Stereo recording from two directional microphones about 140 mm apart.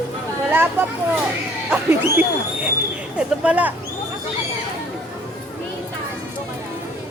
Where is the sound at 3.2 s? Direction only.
10° right (ahead or behind).